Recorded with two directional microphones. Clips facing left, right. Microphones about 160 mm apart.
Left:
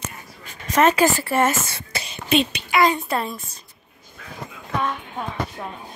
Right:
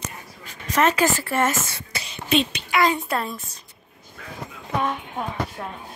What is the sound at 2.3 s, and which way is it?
Hiccup, 5° left (ahead or behind).